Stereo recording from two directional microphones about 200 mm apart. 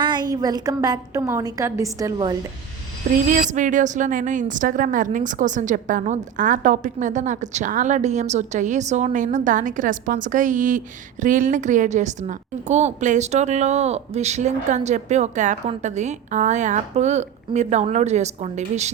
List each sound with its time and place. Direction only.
0.0 s a woman's voice: 20° right (ahead or behind)
3.1 s a woman's voice: 45° right (ahead or behind)